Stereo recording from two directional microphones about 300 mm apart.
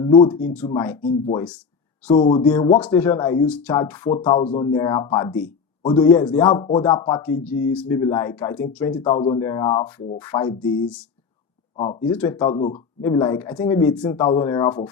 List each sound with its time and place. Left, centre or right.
0.0 s speech: centre
0.3 s speech: centre
2.1 s speech: left
2.6 s speech: centre
6.5 s speech: left
6.7 s speech: centre